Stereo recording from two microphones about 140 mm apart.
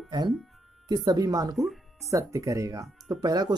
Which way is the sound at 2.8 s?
Centre (ahead or behind).